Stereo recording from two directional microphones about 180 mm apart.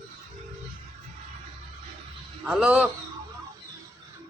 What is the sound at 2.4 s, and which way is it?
Speech, 5° right (ahead or behind).